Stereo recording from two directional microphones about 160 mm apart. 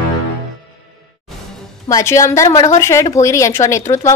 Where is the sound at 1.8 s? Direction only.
20° left (ahead or behind).